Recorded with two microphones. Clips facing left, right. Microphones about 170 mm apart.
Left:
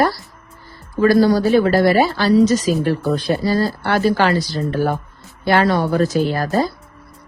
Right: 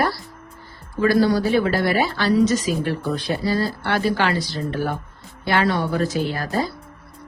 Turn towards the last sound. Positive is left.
turn(degrees=40)  # may be behind; listen again after turning